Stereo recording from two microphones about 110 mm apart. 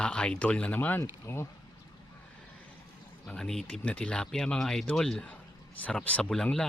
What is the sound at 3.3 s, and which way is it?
Speech, 5° left (ahead or behind).